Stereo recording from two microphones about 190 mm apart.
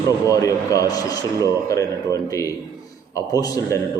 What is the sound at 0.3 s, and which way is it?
A man's voice, 15° left (ahead or behind).